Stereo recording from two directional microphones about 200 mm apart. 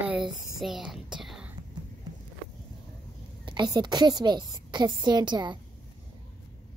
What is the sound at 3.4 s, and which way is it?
A woman's voice, 20° right (ahead or behind).